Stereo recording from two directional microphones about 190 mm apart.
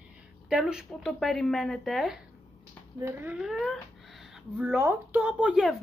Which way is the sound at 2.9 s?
10° right (ahead or behind).